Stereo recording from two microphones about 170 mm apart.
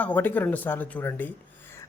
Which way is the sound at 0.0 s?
10° left (ahead or behind).